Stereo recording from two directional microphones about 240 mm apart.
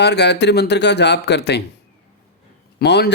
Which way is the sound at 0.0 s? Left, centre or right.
Left.